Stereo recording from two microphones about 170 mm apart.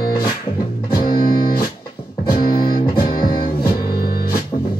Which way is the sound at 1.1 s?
60° left (ahead or behind).